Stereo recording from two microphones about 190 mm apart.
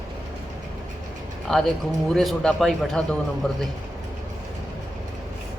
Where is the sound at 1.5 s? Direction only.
Centre (ahead or behind).